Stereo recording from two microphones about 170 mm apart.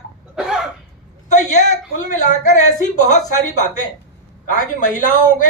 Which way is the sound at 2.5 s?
45° left (ahead or behind).